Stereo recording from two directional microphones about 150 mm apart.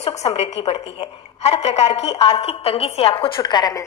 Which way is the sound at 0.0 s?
45° left (ahead or behind).